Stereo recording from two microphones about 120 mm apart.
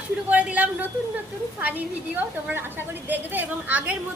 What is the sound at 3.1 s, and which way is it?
Speech, 15° right (ahead or behind).